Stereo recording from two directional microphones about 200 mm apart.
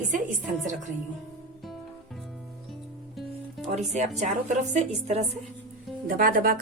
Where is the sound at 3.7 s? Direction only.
35° right (ahead or behind).